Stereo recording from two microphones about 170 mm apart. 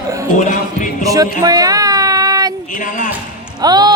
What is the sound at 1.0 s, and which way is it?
Speech, 20° right (ahead or behind).